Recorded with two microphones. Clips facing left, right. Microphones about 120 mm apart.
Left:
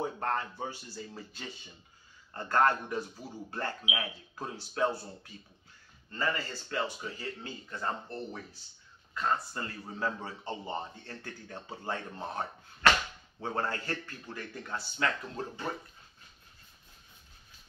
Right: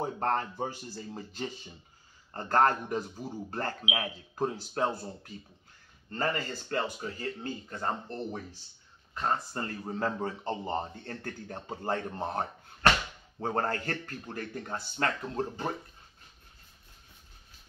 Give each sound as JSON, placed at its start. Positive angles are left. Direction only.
{"t": 0.0, "sound": "speech", "side_deg": -35}
{"t": 9.1, "sound": "speech", "side_deg": -35}
{"t": 13.6, "sound": "speech", "side_deg": -45}